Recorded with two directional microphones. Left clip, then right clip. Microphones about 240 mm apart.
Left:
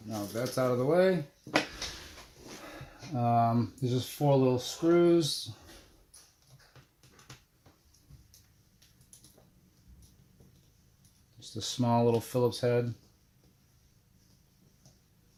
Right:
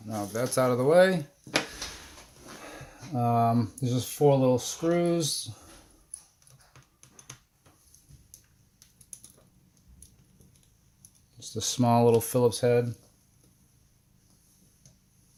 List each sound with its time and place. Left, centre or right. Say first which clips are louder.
0.1 s speech: right 4 dB; right
2.6 s speech: right 3 dB; right
11.3 s speech: right 5 dB; right